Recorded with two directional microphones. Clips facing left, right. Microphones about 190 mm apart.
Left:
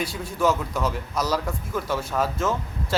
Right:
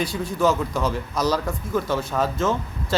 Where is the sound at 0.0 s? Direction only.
5° left (ahead or behind).